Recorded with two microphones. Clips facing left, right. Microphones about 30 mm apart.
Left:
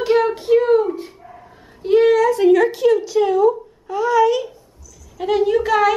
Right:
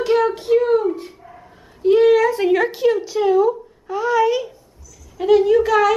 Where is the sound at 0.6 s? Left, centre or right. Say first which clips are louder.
Left 2 dB; centre.